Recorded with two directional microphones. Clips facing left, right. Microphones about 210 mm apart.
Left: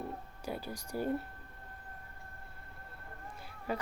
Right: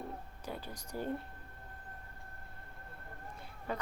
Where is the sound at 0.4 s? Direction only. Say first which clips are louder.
Left 5 dB; 10° left (ahead or behind).